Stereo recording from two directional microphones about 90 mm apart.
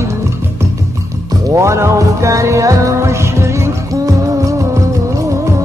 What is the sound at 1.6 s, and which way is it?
Music, 35° right (ahead or behind).